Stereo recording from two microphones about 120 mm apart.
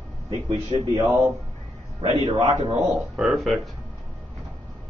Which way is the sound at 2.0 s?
50° right (ahead or behind).